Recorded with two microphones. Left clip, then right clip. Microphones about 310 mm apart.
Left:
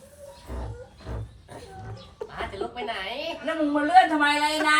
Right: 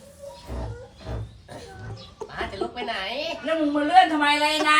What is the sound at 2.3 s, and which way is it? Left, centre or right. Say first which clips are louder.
A woman's voice: right 3 dB; centre.